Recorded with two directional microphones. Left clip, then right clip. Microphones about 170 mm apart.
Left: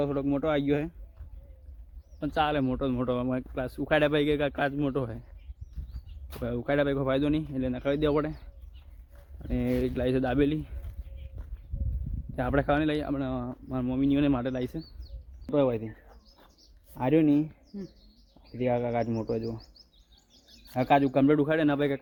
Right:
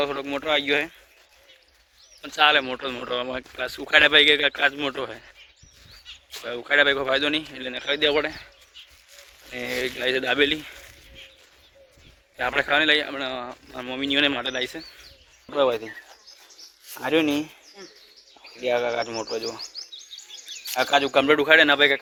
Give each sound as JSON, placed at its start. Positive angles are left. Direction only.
{"t": 0.0, "sound": "speech", "side_deg": 5}
{"t": 2.3, "sound": "speech", "side_deg": -5}
{"t": 6.7, "sound": "speech", "side_deg": 0}
{"t": 9.5, "sound": "speech", "side_deg": 0}
{"t": 12.5, "sound": "speech", "side_deg": -5}
{"t": 15.5, "sound": "speech", "side_deg": -15}
{"t": 17.1, "sound": "speech", "side_deg": -10}
{"t": 17.7, "sound": "speech", "side_deg": 5}
{"t": 18.7, "sound": "speech", "side_deg": -15}
{"t": 20.7, "sound": "speech", "side_deg": -10}